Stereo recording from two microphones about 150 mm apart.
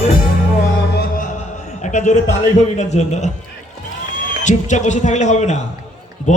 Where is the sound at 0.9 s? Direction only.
70° left (ahead or behind).